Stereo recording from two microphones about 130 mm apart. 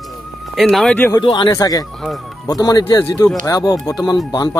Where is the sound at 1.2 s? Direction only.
35° left (ahead or behind).